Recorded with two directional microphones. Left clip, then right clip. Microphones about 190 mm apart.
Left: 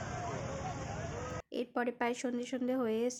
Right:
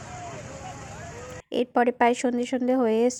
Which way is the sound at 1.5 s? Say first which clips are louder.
Right 14 dB; 35° right (ahead or behind).